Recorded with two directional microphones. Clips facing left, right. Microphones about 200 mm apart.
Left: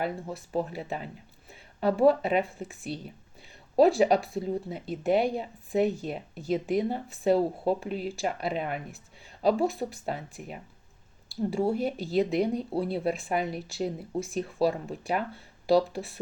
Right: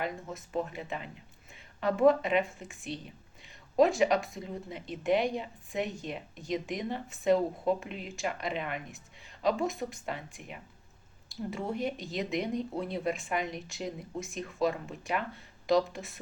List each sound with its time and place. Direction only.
0.0 s speech: 35° left (ahead or behind)